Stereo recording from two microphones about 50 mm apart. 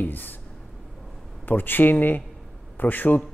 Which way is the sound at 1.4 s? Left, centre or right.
Left.